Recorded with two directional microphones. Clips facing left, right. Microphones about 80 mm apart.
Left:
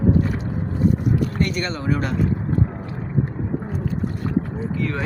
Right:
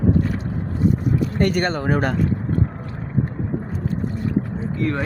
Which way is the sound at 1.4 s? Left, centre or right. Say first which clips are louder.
Right 4 dB; right.